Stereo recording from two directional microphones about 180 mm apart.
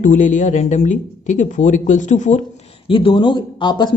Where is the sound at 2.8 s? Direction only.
30° left (ahead or behind).